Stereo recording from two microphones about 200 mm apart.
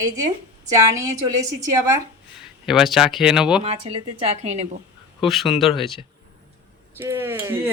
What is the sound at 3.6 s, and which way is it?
A woman's voice, 30° right (ahead or behind).